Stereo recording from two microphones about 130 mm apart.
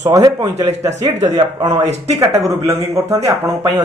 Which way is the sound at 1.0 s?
60° right (ahead or behind).